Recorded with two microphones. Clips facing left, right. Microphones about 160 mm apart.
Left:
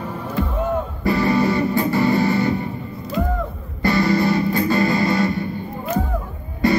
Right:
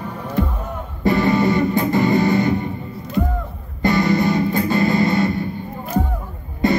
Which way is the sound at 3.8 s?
20° right (ahead or behind).